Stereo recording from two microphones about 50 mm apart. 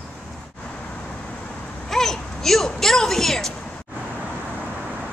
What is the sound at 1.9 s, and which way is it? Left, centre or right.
Speech, centre.